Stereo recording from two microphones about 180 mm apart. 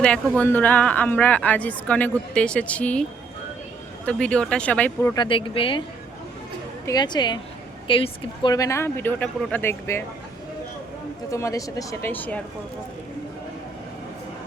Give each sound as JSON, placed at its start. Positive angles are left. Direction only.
{"t": 0.3, "sound": "speech", "side_deg": 10}
{"t": 5.1, "sound": "speech", "side_deg": 25}
{"t": 6.8, "sound": "speech", "side_deg": 25}
{"t": 11.3, "sound": "speech", "side_deg": 15}